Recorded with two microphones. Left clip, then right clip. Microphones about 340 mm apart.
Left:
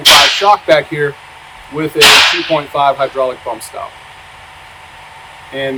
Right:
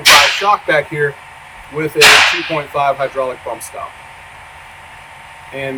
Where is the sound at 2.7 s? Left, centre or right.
Centre.